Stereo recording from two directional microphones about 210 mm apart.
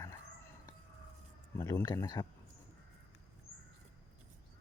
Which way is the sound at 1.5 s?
15° left (ahead or behind).